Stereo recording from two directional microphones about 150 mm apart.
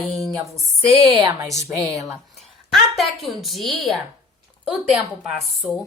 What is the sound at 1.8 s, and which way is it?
Speech, 20° right (ahead or behind).